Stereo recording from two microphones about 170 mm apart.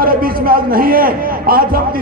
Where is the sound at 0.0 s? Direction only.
60° right (ahead or behind).